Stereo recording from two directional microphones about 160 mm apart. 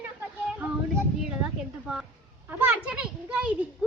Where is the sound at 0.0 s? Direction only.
5° right (ahead or behind).